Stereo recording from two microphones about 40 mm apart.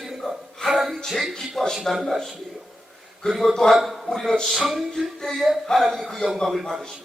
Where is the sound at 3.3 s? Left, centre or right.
Centre.